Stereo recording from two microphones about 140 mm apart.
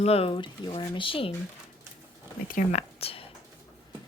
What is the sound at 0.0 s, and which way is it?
Speech, 45° left (ahead or behind).